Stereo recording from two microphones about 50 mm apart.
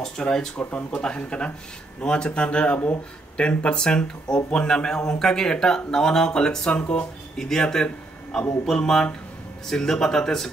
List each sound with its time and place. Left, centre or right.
0.0 s speech: centre
0.7 s speech: left
1.0 s speech: left